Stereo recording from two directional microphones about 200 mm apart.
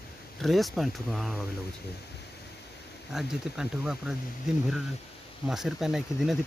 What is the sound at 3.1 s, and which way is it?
Speech, 5° right (ahead or behind).